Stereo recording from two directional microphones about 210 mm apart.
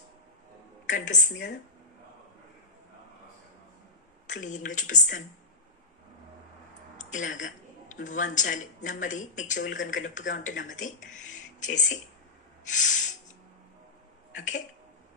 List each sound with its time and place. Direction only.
0.8 s speech: 35° left (ahead or behind)
4.3 s speech: 35° left (ahead or behind)
7.0 s speech: 35° left (ahead or behind)
14.3 s speech: 35° left (ahead or behind)